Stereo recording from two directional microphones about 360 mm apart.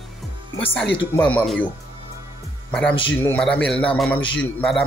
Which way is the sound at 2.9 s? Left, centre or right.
Centre.